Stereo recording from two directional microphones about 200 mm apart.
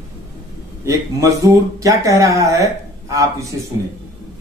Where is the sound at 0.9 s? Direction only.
15° right (ahead or behind).